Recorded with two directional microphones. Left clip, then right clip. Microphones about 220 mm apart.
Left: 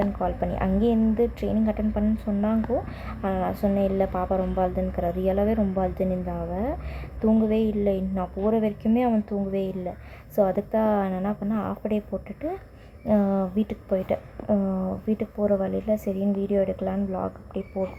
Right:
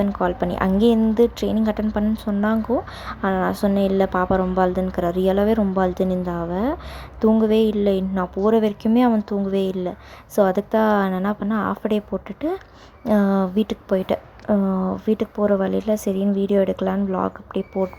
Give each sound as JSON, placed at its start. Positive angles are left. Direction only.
{"t": 0.2, "sound": "speech", "side_deg": -30}